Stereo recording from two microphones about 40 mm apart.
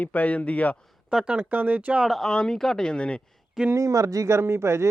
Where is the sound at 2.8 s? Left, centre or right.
Left.